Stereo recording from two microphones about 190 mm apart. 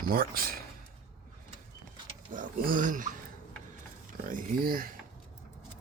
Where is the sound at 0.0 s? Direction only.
50° right (ahead or behind).